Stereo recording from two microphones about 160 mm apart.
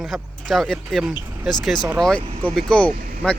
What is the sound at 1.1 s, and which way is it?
Speech, 10° right (ahead or behind).